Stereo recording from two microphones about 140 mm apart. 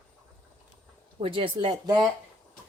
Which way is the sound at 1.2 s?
40° right (ahead or behind).